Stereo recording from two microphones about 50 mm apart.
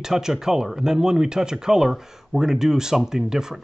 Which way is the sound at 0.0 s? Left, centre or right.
Centre.